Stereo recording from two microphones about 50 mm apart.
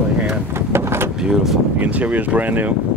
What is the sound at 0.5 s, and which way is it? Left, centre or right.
Speech, right.